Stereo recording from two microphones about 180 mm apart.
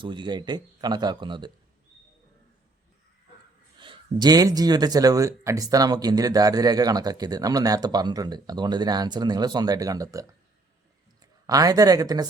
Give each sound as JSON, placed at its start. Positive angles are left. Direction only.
{"t": 0.0, "sound": "speech", "side_deg": -25}
{"t": 3.8, "sound": "a man's voice", "side_deg": -25}